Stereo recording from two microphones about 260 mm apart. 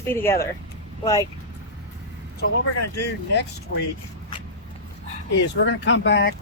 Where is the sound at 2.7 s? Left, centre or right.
Left.